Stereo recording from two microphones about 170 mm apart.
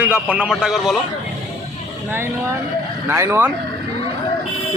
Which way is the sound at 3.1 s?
15° right (ahead or behind).